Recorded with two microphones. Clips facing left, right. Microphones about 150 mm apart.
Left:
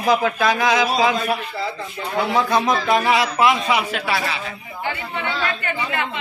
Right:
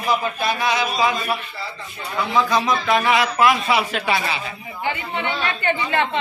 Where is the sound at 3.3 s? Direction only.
20° left (ahead or behind).